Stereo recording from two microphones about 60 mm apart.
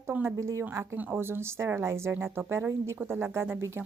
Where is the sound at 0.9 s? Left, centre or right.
Right.